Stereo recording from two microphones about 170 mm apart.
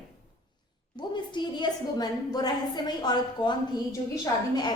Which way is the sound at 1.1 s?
25° left (ahead or behind).